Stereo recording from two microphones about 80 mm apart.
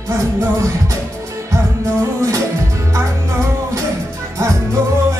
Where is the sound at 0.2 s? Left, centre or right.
Right.